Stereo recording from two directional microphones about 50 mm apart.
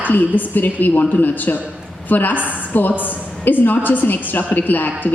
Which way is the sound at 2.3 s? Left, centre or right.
Right.